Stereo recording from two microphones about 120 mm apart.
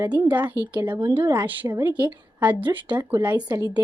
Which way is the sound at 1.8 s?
15° right (ahead or behind).